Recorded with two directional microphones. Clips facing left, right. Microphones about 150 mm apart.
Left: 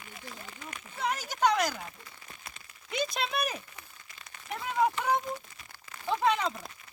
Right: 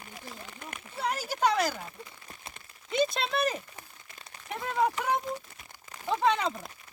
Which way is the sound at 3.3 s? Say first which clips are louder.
Right 4 dB; 5° left (ahead or behind).